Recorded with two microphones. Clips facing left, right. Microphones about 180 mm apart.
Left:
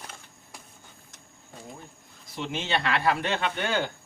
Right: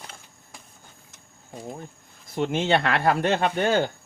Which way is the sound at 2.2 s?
50° right (ahead or behind).